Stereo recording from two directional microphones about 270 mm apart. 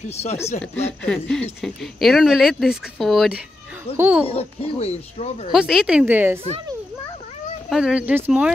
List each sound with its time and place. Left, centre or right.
0.1 s speech: left
0.6 s speech: centre
4.3 s speech: left
5.5 s speech: centre
7.7 s speech: centre